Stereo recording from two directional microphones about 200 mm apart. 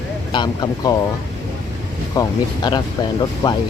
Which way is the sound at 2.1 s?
20° left (ahead or behind).